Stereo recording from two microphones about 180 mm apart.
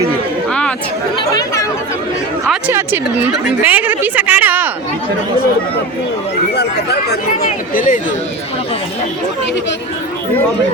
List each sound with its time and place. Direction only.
1.3 s chatter: 20° left (ahead or behind)
2.5 s a woman's voice: 10° right (ahead or behind)
6.5 s a sound: 65° left (ahead or behind)
7.7 s speech: 50° left (ahead or behind)